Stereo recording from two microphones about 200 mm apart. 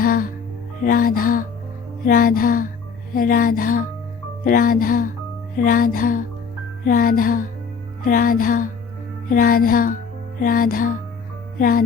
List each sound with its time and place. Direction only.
0.0 s music: 45° left (ahead or behind)